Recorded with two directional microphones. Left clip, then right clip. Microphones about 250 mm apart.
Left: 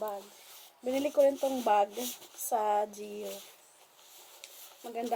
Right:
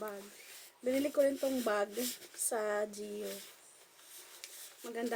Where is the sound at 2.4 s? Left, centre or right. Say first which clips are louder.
Left 6 dB; centre.